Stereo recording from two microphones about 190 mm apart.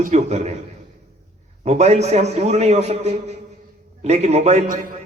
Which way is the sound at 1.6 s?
35° right (ahead or behind).